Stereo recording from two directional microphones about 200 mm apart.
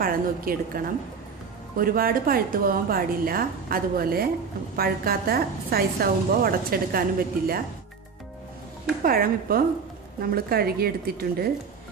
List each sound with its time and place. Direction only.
0.0 s a woman's voice: 45° right (ahead or behind)
9.0 s a woman's voice: 45° right (ahead or behind)